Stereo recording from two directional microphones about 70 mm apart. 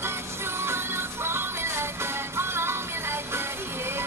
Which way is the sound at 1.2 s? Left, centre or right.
Right.